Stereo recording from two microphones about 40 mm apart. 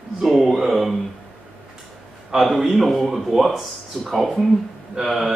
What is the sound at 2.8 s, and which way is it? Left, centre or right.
Speech, centre.